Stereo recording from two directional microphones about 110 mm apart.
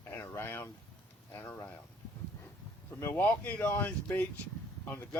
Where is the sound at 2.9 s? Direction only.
15° left (ahead or behind).